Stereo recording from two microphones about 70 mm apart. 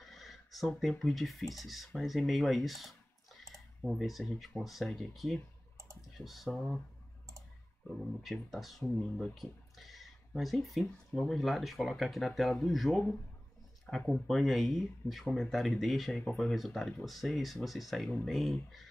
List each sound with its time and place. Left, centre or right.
0.0 s speech: centre
7.9 s speech: centre
13.9 s speech: centre
14.2 s speech: centre